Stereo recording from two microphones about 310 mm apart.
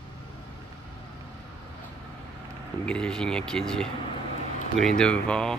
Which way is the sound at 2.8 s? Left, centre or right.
Centre.